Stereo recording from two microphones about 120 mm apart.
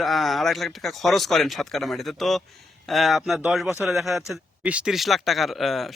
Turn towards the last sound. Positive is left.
turn(degrees=0)  # may be behind; listen again after turning